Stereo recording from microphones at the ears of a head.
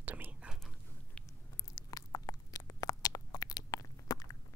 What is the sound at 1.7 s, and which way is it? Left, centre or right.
Biting, left.